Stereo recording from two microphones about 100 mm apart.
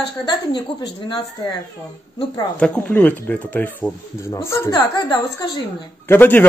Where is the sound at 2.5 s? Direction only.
10° left (ahead or behind); by 4.8 s 25° left (ahead or behind).